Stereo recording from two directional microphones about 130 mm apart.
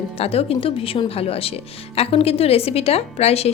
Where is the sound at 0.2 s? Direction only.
50° left (ahead or behind).